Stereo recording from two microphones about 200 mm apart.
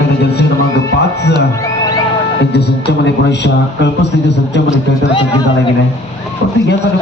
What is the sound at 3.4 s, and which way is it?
A man's voice, 60° left (ahead or behind).